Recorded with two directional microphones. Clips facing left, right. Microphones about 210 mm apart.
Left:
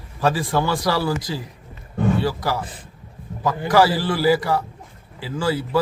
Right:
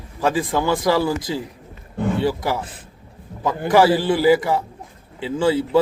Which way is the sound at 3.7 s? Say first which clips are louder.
Right 3 dB; 20° right (ahead or behind).